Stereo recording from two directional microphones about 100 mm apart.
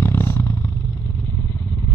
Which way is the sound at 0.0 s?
25° left (ahead or behind).